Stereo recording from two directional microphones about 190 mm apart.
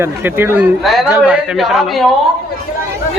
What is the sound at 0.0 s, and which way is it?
A man's voice, 10° right (ahead or behind).